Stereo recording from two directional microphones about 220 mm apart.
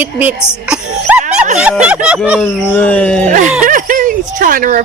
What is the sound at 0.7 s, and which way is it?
Sneeze, 10° right (ahead or behind).